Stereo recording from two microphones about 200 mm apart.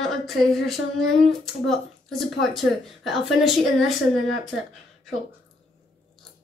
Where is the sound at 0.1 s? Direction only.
Centre (ahead or behind).